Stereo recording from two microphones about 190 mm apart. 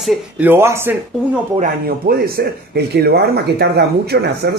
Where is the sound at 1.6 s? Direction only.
50° right (ahead or behind).